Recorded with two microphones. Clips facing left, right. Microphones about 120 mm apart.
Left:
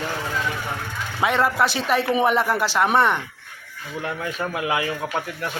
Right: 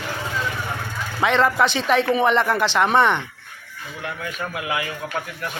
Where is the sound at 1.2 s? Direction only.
5° left (ahead or behind).